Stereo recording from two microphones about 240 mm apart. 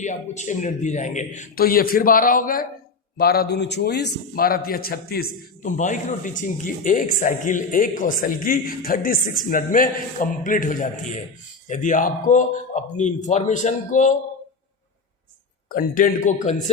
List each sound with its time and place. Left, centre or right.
0.0 s a man's voice: left
15.7 s a man's voice: left